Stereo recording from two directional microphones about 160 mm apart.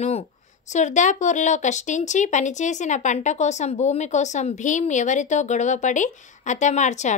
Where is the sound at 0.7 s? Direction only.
45° left (ahead or behind).